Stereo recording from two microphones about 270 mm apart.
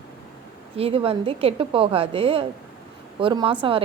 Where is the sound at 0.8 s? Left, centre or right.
Right.